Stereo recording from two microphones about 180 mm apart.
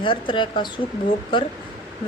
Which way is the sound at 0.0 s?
30° left (ahead or behind).